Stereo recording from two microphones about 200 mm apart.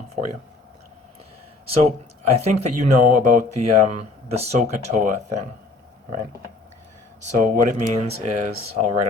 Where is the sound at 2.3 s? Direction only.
35° right (ahead or behind).